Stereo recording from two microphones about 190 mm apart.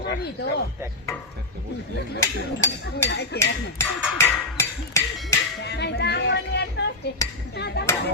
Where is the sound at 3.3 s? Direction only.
15° left (ahead or behind).